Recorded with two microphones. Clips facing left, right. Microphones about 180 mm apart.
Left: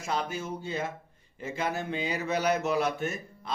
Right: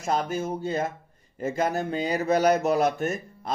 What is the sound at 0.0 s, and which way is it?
Speech, 45° right (ahead or behind).